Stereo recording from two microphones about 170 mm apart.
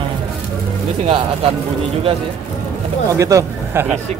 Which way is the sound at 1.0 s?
35° right (ahead or behind).